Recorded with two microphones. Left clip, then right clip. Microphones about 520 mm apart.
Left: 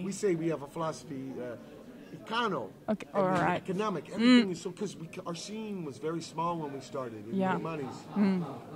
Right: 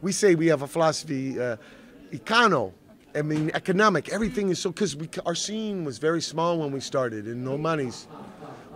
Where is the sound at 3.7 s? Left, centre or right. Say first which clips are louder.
Right 12 dB; right.